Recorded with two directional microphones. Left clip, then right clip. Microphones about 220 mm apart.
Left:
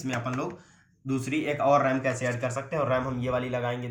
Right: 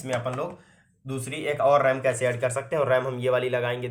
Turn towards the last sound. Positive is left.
turn(degrees=-50)  # may be behind; listen again after turning